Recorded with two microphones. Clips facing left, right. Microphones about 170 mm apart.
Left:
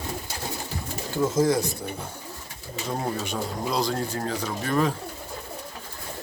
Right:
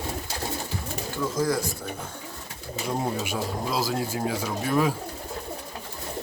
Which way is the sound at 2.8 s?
5° right (ahead or behind).